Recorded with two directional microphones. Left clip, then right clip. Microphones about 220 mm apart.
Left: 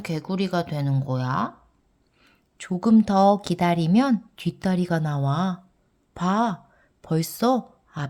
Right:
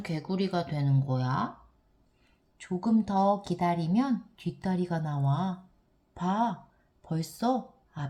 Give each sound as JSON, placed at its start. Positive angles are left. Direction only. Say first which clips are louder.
{"t": 0.0, "sound": "a woman's voice", "louder": "left 4 dB", "side_deg": 30}